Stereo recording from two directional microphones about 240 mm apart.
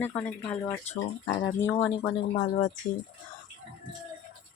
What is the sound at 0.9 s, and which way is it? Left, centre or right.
Speech, left.